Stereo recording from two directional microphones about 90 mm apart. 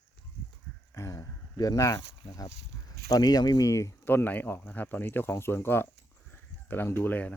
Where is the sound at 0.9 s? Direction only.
35° left (ahead or behind).